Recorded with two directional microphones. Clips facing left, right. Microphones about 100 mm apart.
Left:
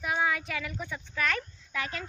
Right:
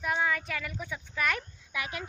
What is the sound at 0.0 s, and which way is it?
A woman's voice, 5° left (ahead or behind).